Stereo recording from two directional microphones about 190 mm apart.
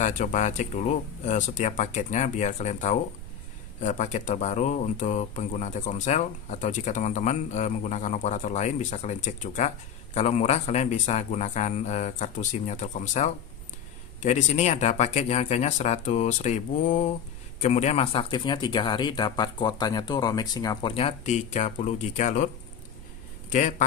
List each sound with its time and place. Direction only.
0.0 s speech: 45° left (ahead or behind)
23.5 s speech: 40° left (ahead or behind)